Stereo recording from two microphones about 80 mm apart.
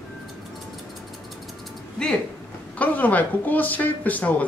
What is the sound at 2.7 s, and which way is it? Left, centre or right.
Speech, centre.